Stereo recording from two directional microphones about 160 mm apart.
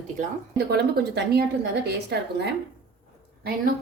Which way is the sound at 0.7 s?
90° right.